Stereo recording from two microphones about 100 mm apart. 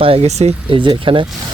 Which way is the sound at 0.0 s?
80° right.